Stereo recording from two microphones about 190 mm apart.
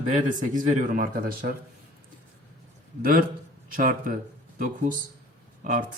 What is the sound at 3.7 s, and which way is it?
Speech, 50° right (ahead or behind).